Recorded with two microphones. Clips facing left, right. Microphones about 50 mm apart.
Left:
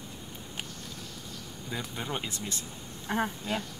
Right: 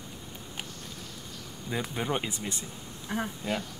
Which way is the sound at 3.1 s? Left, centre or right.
Left.